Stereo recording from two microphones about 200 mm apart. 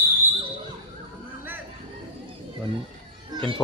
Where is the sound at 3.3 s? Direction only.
25° right (ahead or behind).